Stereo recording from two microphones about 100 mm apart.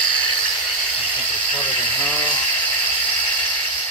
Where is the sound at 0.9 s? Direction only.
15° left (ahead or behind).